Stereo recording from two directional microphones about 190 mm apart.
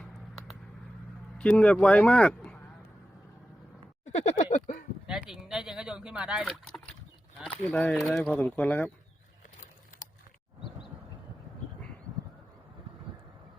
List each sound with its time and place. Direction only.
0.0 s vehicle: centre (ahead or behind)
1.4 s speech: 5° left (ahead or behind)
4.0 s a sound: 40° left (ahead or behind)
5.0 s speech: 5° right (ahead or behind)